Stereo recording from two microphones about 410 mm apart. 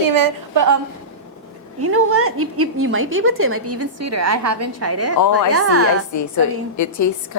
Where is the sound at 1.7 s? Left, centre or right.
Right.